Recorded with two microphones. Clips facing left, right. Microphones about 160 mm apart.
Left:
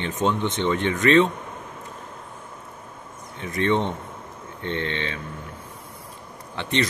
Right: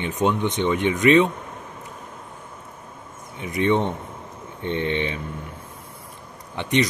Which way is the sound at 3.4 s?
15° right (ahead or behind).